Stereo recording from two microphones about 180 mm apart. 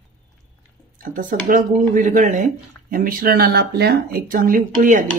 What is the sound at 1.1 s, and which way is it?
Speech, 45° right (ahead or behind).